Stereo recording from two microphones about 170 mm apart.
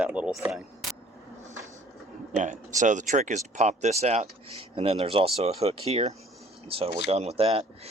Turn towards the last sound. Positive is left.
turn(degrees=-35)  # may be behind; listen again after turning